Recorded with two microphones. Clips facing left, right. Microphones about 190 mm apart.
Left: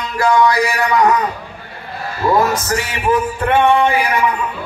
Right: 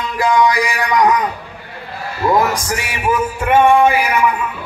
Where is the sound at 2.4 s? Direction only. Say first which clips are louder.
Left 2 dB; 15° right (ahead or behind).